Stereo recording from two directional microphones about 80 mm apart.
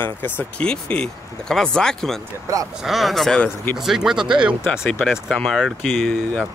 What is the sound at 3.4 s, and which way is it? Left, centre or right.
Speech, left.